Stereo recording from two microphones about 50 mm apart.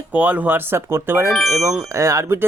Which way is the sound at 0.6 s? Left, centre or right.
Right.